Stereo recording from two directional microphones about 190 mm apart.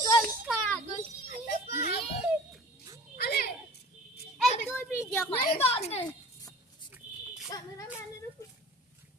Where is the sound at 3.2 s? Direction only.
55° left (ahead or behind).